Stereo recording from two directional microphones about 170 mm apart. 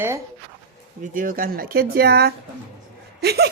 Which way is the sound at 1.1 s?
55° right (ahead or behind).